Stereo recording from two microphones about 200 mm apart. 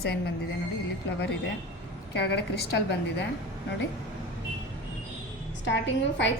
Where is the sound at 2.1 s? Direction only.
55° left (ahead or behind).